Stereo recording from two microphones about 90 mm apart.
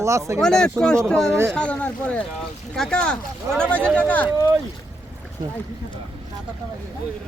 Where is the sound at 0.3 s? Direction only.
5° left (ahead or behind).